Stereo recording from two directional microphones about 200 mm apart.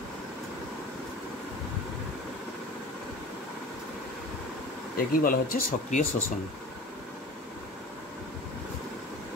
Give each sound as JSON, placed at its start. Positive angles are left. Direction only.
{"t": 4.9, "sound": "speech", "side_deg": 45}